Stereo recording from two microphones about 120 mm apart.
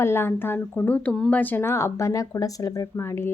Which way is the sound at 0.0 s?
20° left (ahead or behind).